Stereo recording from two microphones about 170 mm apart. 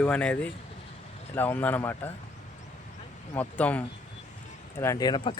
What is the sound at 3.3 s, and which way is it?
Speech, 10° left (ahead or behind).